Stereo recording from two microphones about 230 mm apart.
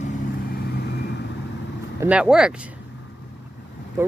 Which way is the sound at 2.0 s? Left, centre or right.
Centre.